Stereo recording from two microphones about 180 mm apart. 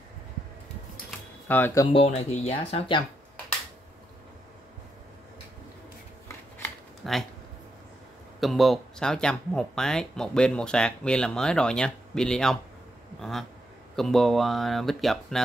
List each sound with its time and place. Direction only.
1.5 s speech: 10° left (ahead or behind)
1.9 s speech: 35° left (ahead or behind)
7.0 s a sound: centre (ahead or behind)
8.4 s speech: centre (ahead or behind)